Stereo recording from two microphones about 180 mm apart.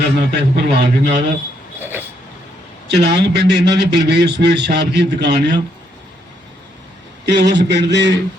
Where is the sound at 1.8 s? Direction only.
10° right (ahead or behind).